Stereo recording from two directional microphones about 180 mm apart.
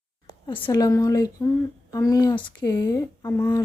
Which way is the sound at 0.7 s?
20° left (ahead or behind).